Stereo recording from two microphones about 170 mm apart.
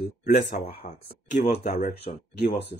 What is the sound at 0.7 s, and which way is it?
Speech, 35° left (ahead or behind).